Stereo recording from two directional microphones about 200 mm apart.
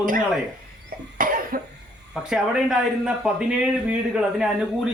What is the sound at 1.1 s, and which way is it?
Cough, 45° right (ahead or behind).